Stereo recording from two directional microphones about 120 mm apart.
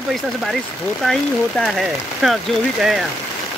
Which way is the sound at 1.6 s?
Centre (ahead or behind).